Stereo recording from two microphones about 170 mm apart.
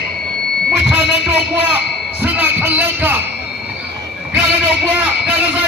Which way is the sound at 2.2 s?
10° right (ahead or behind).